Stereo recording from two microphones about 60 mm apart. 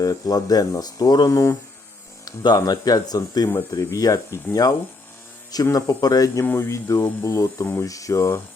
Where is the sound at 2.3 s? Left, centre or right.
Left.